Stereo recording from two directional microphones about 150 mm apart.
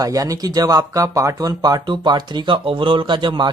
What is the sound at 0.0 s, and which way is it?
Speech, 25° right (ahead or behind).